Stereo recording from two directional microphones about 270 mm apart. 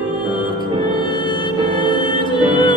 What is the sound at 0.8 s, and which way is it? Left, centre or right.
Music, centre.